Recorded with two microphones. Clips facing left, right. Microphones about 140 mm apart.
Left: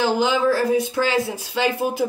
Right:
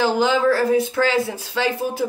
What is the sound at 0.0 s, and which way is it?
Speech, 15° left (ahead or behind).